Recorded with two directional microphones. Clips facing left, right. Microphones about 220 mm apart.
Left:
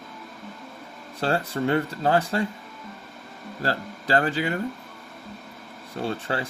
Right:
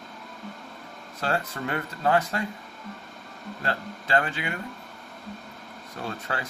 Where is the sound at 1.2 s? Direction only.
30° left (ahead or behind).